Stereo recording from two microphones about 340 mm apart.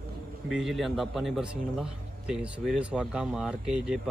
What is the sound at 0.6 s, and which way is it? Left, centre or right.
Speech, centre.